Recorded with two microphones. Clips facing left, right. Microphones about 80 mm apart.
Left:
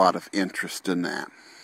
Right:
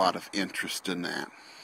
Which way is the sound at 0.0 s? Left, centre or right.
Left.